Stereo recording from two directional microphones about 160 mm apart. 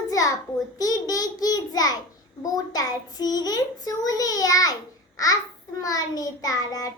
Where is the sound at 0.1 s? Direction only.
20° left (ahead or behind).